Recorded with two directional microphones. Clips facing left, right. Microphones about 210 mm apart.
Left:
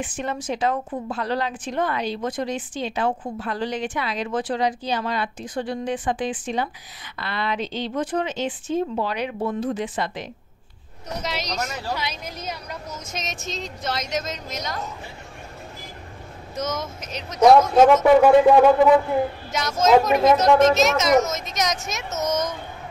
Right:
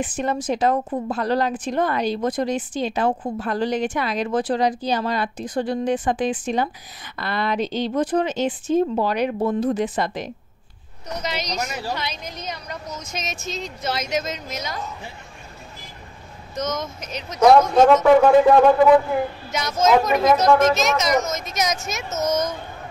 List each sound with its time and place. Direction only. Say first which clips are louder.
0.0 s a woman's voice: right 4 dB; 40° right (ahead or behind)
11.2 s speech: right 1 dB; centre (ahead or behind)
16.5 s speech: right 2 dB; 5° left (ahead or behind)